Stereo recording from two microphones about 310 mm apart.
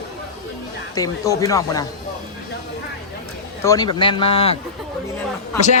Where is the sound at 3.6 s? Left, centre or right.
Centre.